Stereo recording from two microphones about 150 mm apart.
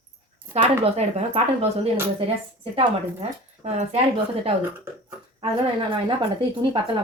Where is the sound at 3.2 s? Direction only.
45° right (ahead or behind).